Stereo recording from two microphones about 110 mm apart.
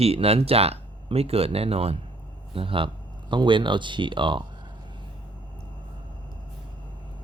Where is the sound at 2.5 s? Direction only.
55° right (ahead or behind).